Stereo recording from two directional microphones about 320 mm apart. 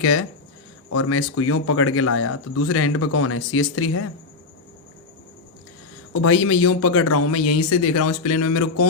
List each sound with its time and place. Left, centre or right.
0.0 s speech: left
6.2 s speech: left